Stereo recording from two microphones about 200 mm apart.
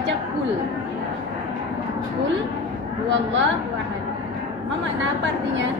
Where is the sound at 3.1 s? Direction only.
65° right (ahead or behind).